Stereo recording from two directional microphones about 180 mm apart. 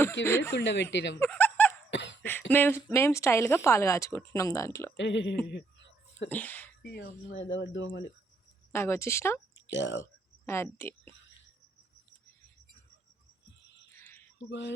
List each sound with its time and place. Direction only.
0.3 s speech: 15° left (ahead or behind)
0.5 s speech: 80° left
1.2 s chuckle: 10° left (ahead or behind)
1.9 s a sound: 75° left (ahead or behind)
2.5 s speech: 10° left (ahead or behind)
4.9 s speech: 90° left
5.5 s a sound: 70° left (ahead or behind)
6.2 s speech: 10° left (ahead or behind)
6.8 s speech: 75° left (ahead or behind)
8.7 s speech: 15° left (ahead or behind)
9.6 s speech: 80° left
10.0 s speech: 15° left (ahead or behind)
13.9 s a sound: 15° left (ahead or behind)
14.5 s speech: 75° left (ahead or behind)